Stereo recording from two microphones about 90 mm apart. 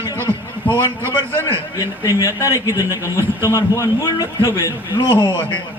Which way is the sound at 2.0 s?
35° left (ahead or behind).